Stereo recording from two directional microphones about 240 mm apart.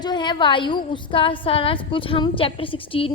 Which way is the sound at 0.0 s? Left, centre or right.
Centre.